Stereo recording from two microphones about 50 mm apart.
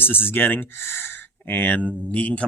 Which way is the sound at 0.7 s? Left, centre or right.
Left.